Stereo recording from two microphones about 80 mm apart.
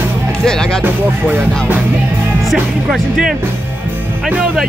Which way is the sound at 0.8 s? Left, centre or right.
Right.